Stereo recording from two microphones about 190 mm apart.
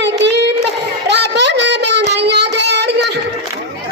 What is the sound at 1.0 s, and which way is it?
Child singing, 65° right (ahead or behind).